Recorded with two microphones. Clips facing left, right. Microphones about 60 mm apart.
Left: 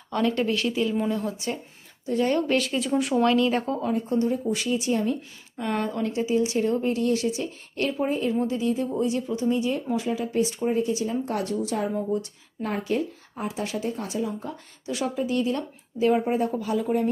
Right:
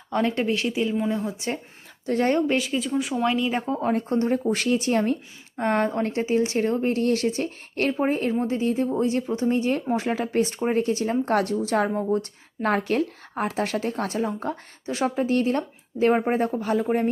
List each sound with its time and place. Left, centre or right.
0.1 s speech: right
2.1 s speech: right
2.6 s speech: centre
3.2 s speech: centre
3.9 s speech: right
5.5 s speech: right
11.9 s speech: right
12.6 s speech: right